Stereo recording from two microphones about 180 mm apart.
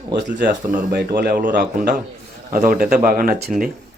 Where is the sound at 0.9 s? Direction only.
65° right (ahead or behind).